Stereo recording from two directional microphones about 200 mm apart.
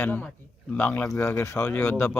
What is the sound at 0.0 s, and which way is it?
A man's voice, 10° left (ahead or behind).